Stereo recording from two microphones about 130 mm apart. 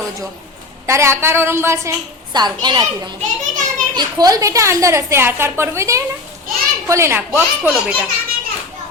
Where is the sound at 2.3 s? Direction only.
35° right (ahead or behind).